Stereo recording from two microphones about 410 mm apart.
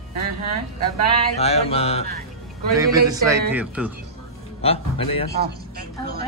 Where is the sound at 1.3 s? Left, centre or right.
Centre.